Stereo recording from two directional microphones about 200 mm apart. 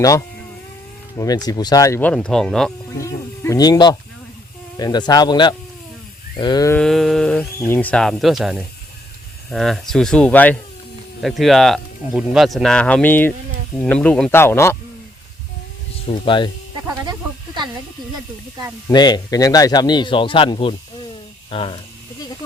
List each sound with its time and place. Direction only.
1.1 s speech: 20° left (ahead or behind); by 2.7 s centre (ahead or behind)
3.0 s snake: 15° left (ahead or behind)
4.8 s speech: 20° left (ahead or behind)
6.7 s speech: centre (ahead or behind)
16.0 s speech: 25° left (ahead or behind)
17.1 s a sound: 20° right (ahead or behind)
18.9 s speech: 20° left (ahead or behind)